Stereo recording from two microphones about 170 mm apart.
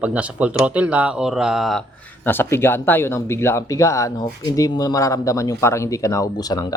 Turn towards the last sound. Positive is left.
turn(degrees=25)  # may be behind; listen again after turning